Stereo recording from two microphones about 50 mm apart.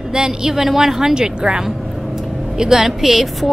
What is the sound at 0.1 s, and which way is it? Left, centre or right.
A woman's voice, centre.